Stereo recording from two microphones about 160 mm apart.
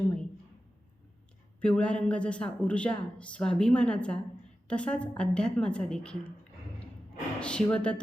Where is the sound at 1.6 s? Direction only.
5° left (ahead or behind).